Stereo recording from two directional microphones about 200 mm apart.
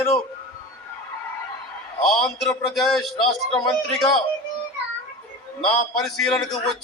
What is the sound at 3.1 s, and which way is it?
Speech, 20° left (ahead or behind).